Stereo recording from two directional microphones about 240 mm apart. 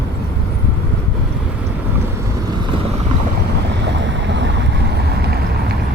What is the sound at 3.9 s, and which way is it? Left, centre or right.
Boat, right.